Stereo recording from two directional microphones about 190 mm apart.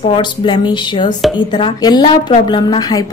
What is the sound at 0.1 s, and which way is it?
A woman's voice, 25° left (ahead or behind).